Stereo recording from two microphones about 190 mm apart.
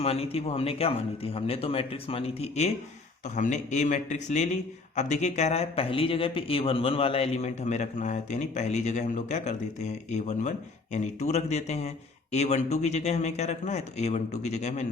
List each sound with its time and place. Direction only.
0.0 s a man's voice: 30° left (ahead or behind)